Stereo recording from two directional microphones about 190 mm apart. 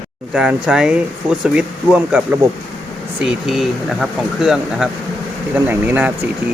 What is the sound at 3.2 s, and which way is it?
Speech, centre (ahead or behind).